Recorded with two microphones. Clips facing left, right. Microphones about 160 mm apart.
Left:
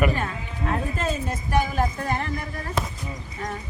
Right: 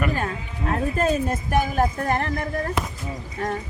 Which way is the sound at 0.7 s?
45° right (ahead or behind).